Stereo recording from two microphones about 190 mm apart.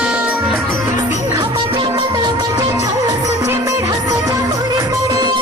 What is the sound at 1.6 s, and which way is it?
Music, 25° right (ahead or behind).